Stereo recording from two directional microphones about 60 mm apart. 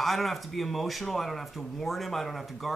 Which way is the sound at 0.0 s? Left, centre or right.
Centre.